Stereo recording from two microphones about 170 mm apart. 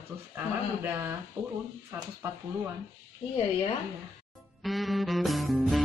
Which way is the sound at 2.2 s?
15° right (ahead or behind).